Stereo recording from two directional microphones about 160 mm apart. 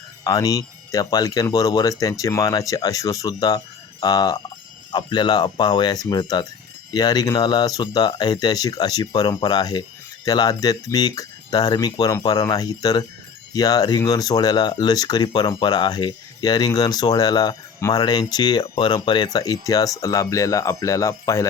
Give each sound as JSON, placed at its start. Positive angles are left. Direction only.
{"t": 0.3, "sound": "speech", "side_deg": 20}